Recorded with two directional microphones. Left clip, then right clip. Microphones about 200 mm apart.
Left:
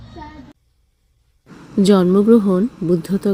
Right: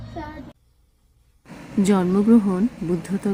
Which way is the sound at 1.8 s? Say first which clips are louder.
Left 7 dB; 15° left (ahead or behind).